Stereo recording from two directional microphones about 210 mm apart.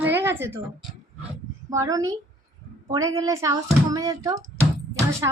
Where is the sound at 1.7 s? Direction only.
15° right (ahead or behind).